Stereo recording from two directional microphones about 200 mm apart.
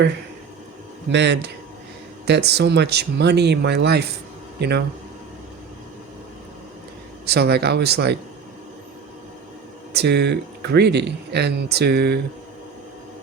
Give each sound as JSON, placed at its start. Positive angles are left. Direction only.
{"t": 1.1, "sound": "speech", "side_deg": -60}
{"t": 7.3, "sound": "speech", "side_deg": -55}
{"t": 9.9, "sound": "speech", "side_deg": -55}